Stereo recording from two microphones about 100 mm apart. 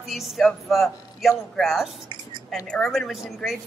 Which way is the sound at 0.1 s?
Centre (ahead or behind).